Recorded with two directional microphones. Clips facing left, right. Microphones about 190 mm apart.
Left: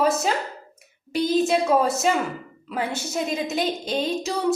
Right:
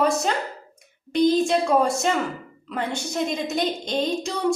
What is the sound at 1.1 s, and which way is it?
A woman's voice, 5° left (ahead or behind).